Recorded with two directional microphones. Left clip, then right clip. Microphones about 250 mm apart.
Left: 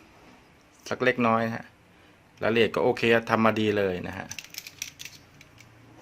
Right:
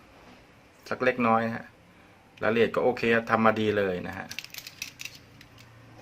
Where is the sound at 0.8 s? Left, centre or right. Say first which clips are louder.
Left 1 dB; left.